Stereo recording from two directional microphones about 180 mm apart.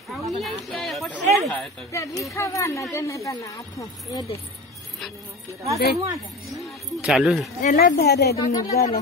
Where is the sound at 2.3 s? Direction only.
15° left (ahead or behind).